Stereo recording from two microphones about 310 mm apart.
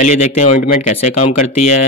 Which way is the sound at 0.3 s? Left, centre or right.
Left.